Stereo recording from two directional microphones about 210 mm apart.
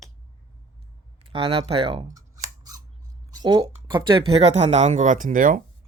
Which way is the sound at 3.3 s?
20° right (ahead or behind).